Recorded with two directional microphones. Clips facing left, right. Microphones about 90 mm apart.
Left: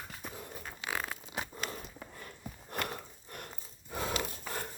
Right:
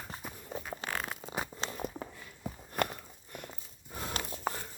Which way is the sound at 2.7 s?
75° left (ahead or behind).